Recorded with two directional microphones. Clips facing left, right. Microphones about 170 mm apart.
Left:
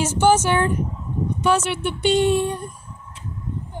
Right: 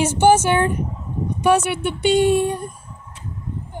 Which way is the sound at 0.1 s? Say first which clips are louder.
Right 2 dB; 55° right (ahead or behind).